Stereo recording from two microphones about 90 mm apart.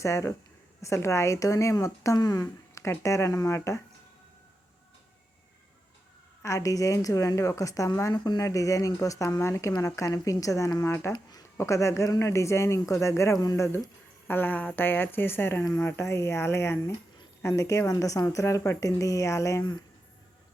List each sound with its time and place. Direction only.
0.0 s a woman's voice: 30° left (ahead or behind)
6.4 s a woman's voice: 35° left (ahead or behind)
8.1 s speech: 50° left (ahead or behind)
8.4 s a woman's voice: 35° left (ahead or behind)
11.1 s a sound: 45° left (ahead or behind)
11.5 s a woman's voice: 35° left (ahead or behind)
14.3 s speech: 20° left (ahead or behind)
16.0 s a woman's voice: 30° left (ahead or behind)